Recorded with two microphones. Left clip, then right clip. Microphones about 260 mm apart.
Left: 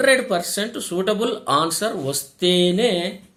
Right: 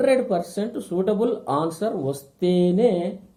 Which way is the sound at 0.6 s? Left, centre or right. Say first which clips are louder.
Left 1 dB; left.